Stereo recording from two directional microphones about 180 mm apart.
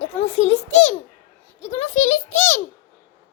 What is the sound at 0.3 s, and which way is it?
A child's voice, 35° left (ahead or behind).